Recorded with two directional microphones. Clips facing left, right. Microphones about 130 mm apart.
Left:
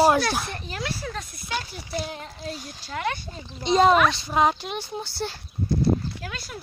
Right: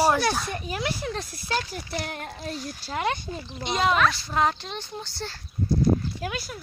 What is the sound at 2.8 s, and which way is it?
Speech, 25° right (ahead or behind).